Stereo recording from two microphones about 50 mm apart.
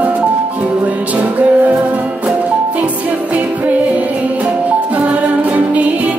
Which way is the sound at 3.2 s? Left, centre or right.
Right.